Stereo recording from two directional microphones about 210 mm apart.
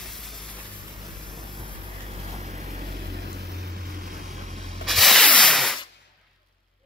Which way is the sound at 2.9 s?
50° right (ahead or behind).